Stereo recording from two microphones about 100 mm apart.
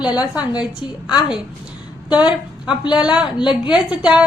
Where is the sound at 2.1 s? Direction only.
10° right (ahead or behind).